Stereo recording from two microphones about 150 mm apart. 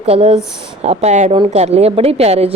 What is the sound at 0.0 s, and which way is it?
A woman's voice, 40° right (ahead or behind).